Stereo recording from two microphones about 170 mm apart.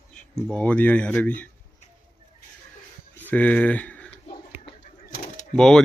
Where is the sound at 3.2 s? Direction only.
10° left (ahead or behind).